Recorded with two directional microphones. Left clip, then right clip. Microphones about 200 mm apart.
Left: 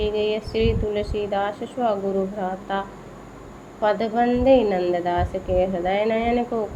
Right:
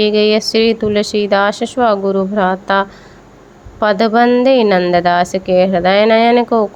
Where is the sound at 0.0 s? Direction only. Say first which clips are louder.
Right 11 dB; 35° right (ahead or behind).